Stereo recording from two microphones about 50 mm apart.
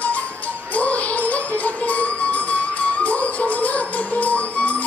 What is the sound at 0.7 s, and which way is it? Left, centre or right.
Music, left.